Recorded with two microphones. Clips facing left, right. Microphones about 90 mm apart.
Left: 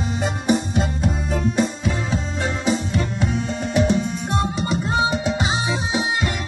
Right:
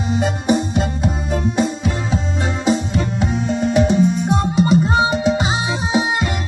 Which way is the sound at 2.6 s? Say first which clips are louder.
Right 5 dB; 35° right (ahead or behind).